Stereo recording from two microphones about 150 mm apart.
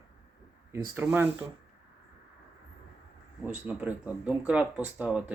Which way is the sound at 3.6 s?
10° right (ahead or behind).